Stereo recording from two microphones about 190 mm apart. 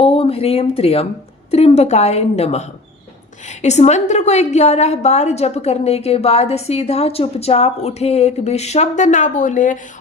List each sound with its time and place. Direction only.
0.0 s a woman's voice: 30° left (ahead or behind)